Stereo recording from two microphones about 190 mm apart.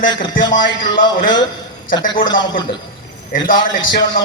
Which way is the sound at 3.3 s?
45° left (ahead or behind).